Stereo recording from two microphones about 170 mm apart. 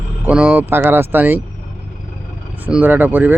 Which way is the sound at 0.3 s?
10° right (ahead or behind).